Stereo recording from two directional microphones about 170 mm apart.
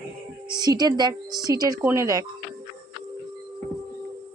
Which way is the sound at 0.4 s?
25° right (ahead or behind).